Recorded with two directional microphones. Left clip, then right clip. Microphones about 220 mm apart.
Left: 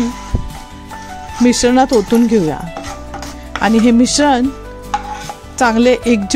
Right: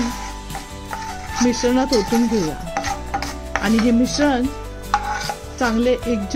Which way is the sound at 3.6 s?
45° left (ahead or behind).